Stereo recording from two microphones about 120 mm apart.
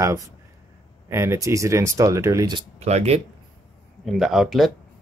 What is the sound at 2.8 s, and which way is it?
Speech, 60° right (ahead or behind).